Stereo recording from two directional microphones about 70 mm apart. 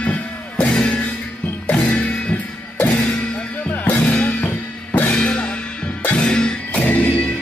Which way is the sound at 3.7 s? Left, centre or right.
Left.